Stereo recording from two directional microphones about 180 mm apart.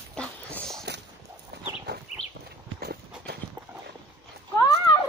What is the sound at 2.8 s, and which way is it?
Clip-clop, 65° right (ahead or behind).